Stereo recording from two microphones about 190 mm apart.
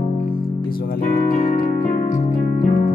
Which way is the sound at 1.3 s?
35° left (ahead or behind).